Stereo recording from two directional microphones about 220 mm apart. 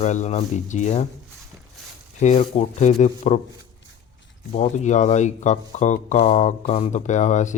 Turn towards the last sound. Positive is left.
turn(degrees=30)  # may be behind; listen again after turning